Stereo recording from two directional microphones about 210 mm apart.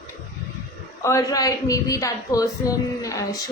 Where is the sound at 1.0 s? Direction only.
15° left (ahead or behind).